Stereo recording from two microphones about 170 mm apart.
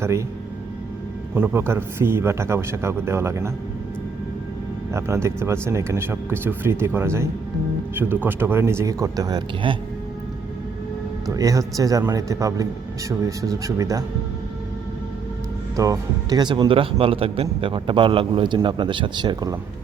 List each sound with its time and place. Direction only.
0.0 s speech: 15° right (ahead or behind)
1.3 s speech: 10° right (ahead or behind)
4.9 s speech: 15° right (ahead or behind)
11.3 s a man's voice: 20° right (ahead or behind)
15.7 s a man's voice: 20° right (ahead or behind)